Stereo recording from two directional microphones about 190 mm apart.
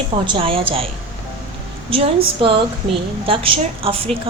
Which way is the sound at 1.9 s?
30° right (ahead or behind).